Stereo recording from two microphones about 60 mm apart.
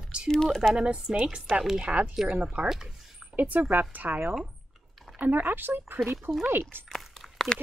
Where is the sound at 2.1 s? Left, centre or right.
Centre.